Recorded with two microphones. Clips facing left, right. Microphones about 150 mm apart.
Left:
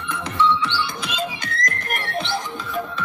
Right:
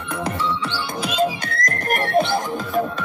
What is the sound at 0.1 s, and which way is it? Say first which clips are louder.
Music: left 3 dB; 40° right (ahead or behind).